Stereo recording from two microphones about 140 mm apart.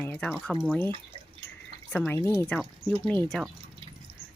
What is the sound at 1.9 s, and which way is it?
Speech, 15° left (ahead or behind).